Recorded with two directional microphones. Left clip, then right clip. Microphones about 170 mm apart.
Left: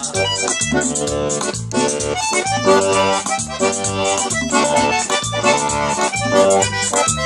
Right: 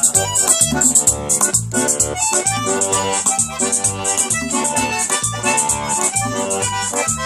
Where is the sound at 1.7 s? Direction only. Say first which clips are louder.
Left 1 dB; 55° left (ahead or behind).